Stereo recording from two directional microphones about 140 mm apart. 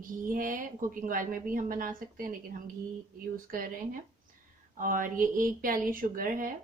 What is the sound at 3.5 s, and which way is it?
Speech, 90° right.